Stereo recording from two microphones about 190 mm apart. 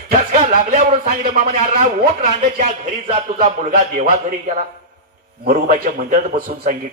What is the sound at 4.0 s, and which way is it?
Speech, 40° right (ahead or behind).